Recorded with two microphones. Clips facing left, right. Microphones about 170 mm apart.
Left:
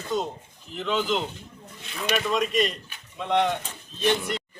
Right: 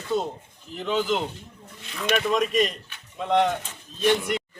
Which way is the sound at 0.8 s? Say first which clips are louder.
Right 1 dB; 10° right (ahead or behind).